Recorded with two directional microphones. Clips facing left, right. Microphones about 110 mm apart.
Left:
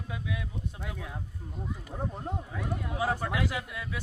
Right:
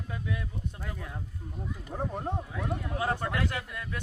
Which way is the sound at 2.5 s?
5° left (ahead or behind).